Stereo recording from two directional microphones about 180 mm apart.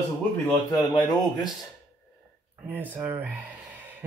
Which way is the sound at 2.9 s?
10° right (ahead or behind).